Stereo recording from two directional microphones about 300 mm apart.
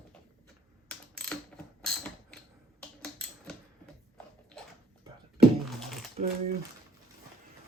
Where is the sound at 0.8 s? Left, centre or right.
Centre.